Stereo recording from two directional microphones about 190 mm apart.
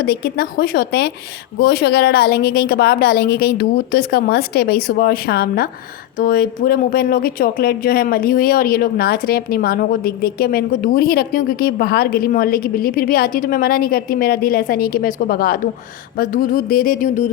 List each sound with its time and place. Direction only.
0.0 s a woman's voice: 55° left (ahead or behind)